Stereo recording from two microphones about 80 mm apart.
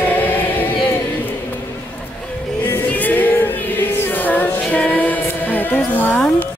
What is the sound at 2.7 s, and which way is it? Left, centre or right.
Music, left.